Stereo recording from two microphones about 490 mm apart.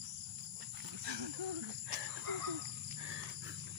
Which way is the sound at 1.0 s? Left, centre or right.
Right.